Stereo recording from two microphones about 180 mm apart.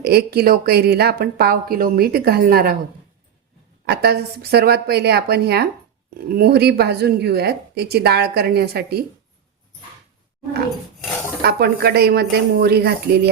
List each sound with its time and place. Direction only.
0.0 s speech: 60° right (ahead or behind)
3.8 s speech: 60° right (ahead or behind)
11.4 s speech: 60° right (ahead or behind)